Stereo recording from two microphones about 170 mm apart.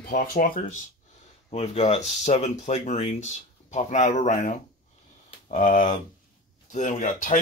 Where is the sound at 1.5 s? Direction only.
40° left (ahead or behind).